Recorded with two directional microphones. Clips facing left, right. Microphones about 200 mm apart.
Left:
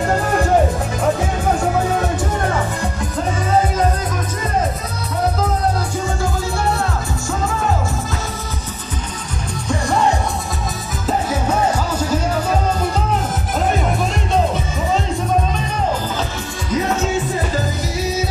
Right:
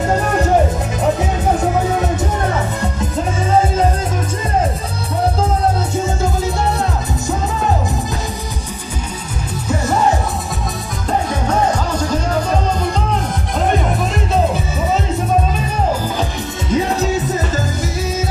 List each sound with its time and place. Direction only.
11.1 s music: 5° left (ahead or behind)
16.7 s music: 35° right (ahead or behind)